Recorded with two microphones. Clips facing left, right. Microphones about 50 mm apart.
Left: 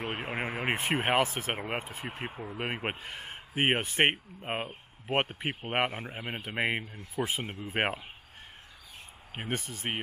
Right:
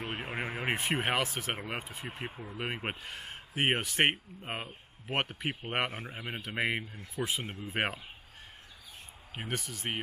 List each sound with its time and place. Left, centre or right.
0.0 s speech: left
6.1 s speech: left
6.4 s speech: centre
7.2 s speech: left
9.6 s speech: left